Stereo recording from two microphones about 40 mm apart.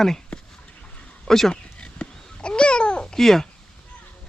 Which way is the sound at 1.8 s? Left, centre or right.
Left.